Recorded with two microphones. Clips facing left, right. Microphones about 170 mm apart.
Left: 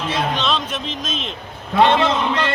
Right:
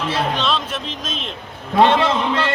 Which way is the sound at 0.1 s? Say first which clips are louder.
Even; 5° right (ahead or behind).